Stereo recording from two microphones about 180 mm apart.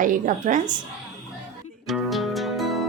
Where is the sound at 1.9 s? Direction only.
Centre (ahead or behind).